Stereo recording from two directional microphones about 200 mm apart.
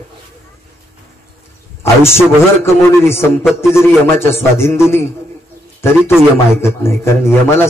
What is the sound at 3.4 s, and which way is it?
Speech, 5° right (ahead or behind).